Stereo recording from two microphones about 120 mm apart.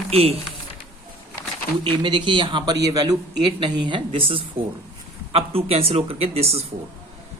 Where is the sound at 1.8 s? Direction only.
40° right (ahead or behind); by 6.6 s 55° right (ahead or behind).